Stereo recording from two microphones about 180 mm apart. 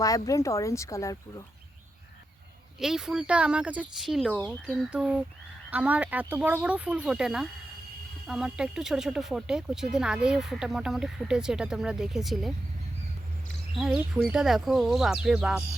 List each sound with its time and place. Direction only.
0.0 s speech: 20° left (ahead or behind)
2.8 s speech: 5° right (ahead or behind)
13.7 s speech: centre (ahead or behind)